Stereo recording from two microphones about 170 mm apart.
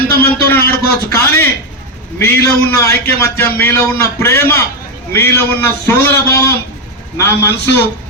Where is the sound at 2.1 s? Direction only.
10° left (ahead or behind).